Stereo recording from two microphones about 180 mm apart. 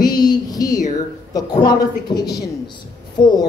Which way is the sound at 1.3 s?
20° left (ahead or behind).